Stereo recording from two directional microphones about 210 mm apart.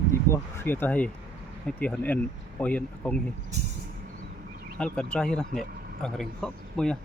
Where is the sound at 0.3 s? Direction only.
10° left (ahead or behind).